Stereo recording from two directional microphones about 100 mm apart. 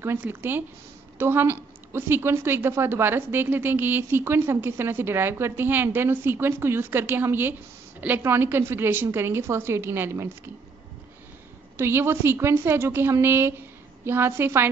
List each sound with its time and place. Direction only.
0.0 s a woman's voice: 20° right (ahead or behind)
11.7 s a woman's voice: 25° right (ahead or behind)